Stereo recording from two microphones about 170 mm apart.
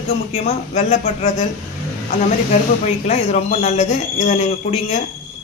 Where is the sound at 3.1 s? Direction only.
40° left (ahead or behind).